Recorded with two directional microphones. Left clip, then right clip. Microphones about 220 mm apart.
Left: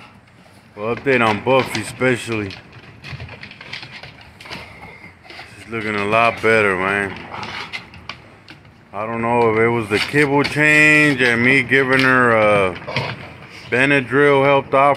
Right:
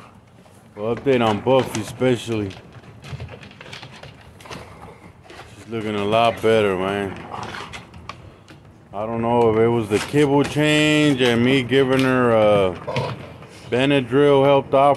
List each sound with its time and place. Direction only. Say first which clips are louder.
0.7 s speech: left 2 dB; 10° right (ahead or behind)
5.7 s speech: left 2 dB; 10° right (ahead or behind)
8.9 s speech: left 2 dB; 10° right (ahead or behind)